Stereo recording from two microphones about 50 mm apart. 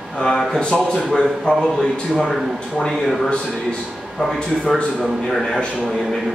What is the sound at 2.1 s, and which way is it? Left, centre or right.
Speech, centre.